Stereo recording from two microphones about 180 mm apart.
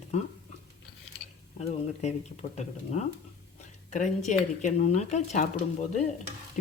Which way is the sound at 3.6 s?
45° left (ahead or behind).